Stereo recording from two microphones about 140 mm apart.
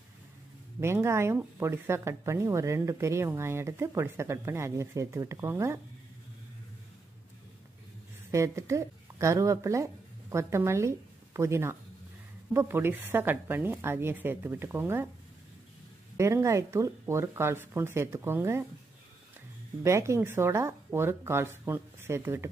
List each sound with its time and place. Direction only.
0.7 s speech: 20° right (ahead or behind)
8.3 s a woman's voice: 20° right (ahead or behind)
16.2 s speech: 20° right (ahead or behind)
19.8 s speech: 20° right (ahead or behind)